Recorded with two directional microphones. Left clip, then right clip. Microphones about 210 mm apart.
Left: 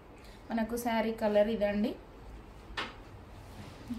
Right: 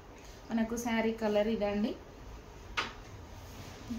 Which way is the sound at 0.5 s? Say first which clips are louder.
Left 2 dB; 50° left (ahead or behind).